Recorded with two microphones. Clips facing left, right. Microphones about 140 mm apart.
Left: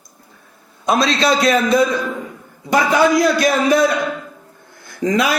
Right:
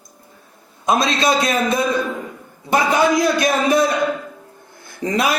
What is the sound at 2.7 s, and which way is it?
A man's voice, 20° right (ahead or behind).